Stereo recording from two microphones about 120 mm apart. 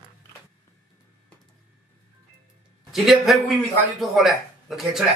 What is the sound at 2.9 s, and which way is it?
A man's voice, centre (ahead or behind).